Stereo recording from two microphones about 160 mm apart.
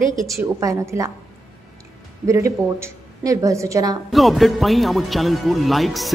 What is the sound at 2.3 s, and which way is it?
A woman's voice, 20° right (ahead or behind).